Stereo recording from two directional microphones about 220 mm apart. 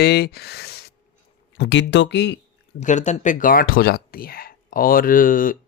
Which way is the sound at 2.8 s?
30° left (ahead or behind).